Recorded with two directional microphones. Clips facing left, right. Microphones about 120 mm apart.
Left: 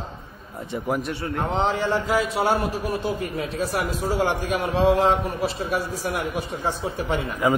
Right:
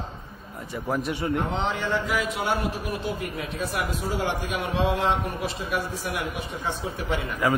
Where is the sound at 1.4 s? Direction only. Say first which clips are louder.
Left 4 dB; 35° left (ahead or behind).